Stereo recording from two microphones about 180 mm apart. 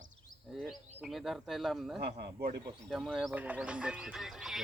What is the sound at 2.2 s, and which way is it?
Speech, 60° right (ahead or behind).